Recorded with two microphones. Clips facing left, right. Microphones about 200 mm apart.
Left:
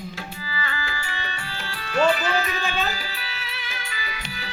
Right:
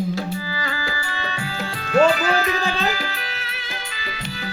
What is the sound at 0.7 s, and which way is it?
Music, 40° right (ahead or behind).